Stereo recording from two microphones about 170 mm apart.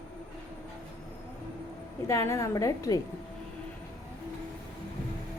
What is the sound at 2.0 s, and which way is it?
Speech, 15° left (ahead or behind).